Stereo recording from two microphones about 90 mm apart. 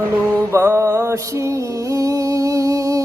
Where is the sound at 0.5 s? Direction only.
30° right (ahead or behind).